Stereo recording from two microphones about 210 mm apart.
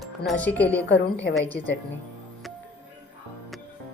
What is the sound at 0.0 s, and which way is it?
A woman's voice, centre (ahead or behind).